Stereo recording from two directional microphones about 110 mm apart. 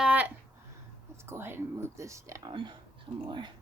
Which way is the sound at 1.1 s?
25° right (ahead or behind).